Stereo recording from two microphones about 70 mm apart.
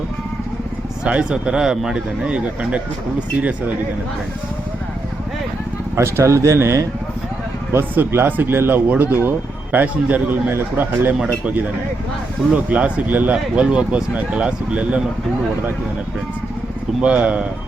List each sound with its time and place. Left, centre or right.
1.0 s speech: centre
6.0 s speech: right
7.7 s a man's voice: right
12.6 s a man's voice: right
13.3 s speech: centre
17.0 s speech: centre